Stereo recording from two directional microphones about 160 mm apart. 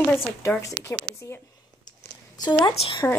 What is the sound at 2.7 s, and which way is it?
Speech, 35° left (ahead or behind).